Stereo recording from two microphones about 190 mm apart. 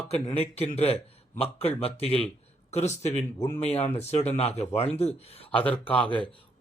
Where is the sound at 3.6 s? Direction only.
35° left (ahead or behind).